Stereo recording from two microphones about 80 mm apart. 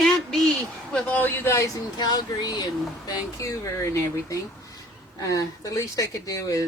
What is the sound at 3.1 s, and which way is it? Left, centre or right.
Speech, left.